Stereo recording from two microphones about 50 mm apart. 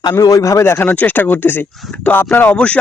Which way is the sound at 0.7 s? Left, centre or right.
Left.